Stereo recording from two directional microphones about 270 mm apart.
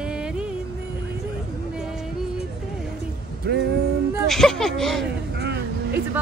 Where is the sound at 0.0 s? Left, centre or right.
Centre.